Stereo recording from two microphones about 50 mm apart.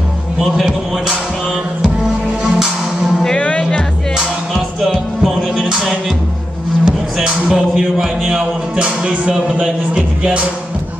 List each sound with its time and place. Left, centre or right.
2.4 s music: centre
3.3 s music: left
4.6 s music: centre
6.8 s music: centre
7.7 s music: centre
8.7 s music: right